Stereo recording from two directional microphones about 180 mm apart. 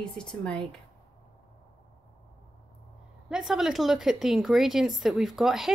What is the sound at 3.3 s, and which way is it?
A woman's voice, centre (ahead or behind).